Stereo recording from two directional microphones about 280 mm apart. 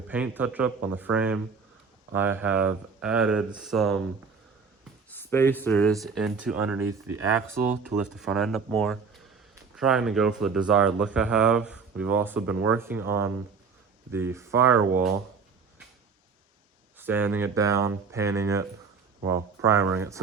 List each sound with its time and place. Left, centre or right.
0.1 s speech: centre
5.1 s speech: centre
7.9 s speech: centre
17.0 s speech: centre